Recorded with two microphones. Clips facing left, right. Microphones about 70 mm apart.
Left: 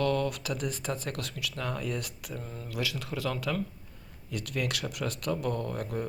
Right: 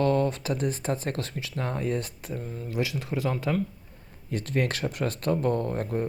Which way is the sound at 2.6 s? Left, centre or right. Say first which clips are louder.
Right 5 dB; right.